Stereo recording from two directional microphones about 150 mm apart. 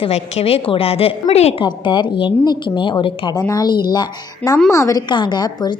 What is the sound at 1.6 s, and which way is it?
A woman's voice, 30° left (ahead or behind).